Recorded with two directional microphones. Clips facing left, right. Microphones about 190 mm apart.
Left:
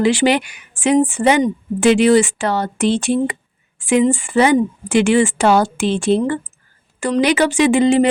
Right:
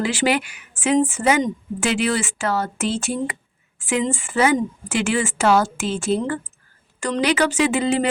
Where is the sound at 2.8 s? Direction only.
70° left (ahead or behind).